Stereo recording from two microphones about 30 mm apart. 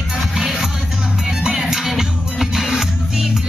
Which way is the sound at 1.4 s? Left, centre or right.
Centre.